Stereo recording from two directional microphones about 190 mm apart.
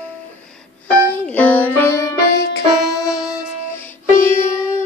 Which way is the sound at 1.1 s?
10° left (ahead or behind).